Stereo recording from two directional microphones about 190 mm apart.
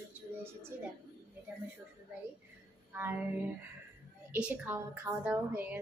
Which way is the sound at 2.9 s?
10° right (ahead or behind).